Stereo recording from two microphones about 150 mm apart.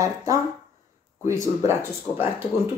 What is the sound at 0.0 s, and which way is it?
Speech, 20° right (ahead or behind).